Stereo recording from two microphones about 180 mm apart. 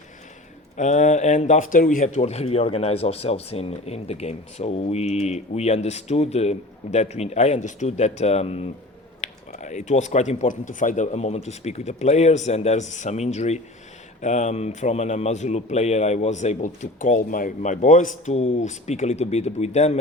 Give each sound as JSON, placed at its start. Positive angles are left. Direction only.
{"t": 0.8, "sound": "speech", "side_deg": 40}